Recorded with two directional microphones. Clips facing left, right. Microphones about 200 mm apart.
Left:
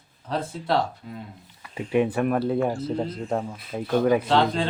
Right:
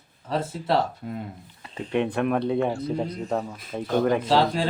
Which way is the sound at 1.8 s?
5° left (ahead or behind).